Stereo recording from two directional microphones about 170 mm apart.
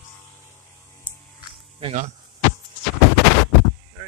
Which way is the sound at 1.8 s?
40° right (ahead or behind).